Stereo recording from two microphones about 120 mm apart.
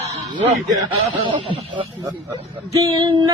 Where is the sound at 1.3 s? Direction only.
45° right (ahead or behind).